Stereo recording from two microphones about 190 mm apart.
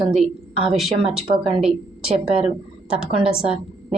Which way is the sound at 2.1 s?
30° right (ahead or behind).